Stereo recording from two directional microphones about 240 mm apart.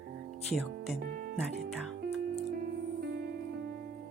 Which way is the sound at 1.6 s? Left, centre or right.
Right.